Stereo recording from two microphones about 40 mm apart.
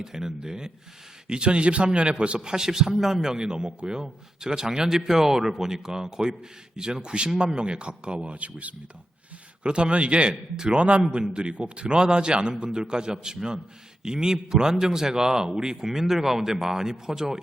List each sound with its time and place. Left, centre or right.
0.0 s a man's voice: centre